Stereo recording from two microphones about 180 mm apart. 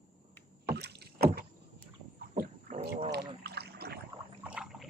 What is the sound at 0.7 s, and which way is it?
Rowboat, 65° right (ahead or behind).